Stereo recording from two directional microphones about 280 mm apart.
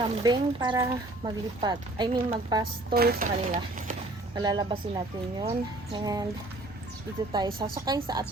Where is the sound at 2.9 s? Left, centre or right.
Right.